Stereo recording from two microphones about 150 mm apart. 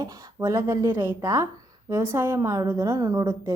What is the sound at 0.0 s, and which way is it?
A woman's voice, 25° right (ahead or behind).